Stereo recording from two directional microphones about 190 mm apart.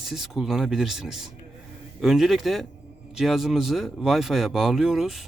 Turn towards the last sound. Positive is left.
turn(degrees=0)  # may be behind; listen again after turning